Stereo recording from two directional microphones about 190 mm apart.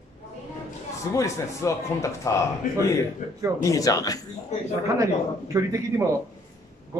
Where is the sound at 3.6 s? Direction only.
20° left (ahead or behind).